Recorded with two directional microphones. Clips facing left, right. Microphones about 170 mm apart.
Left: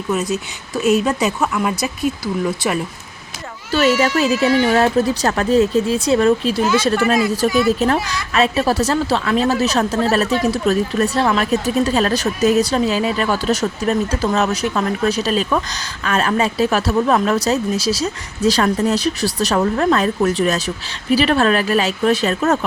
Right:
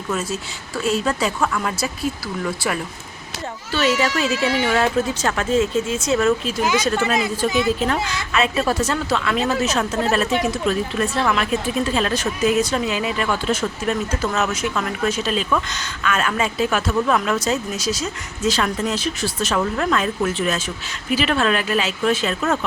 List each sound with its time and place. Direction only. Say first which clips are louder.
0.1 s speech: left 5 dB; 15° left (ahead or behind)
3.7 s a woman's voice: left 5 dB; 40° left (ahead or behind)
7.0 s a woman's voice: left 4 dB; 20° right (ahead or behind)
8.3 s a woman's voice: left 4 dB; 35° left (ahead or behind)